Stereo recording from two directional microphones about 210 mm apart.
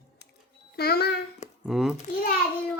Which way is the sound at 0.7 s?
50° left (ahead or behind).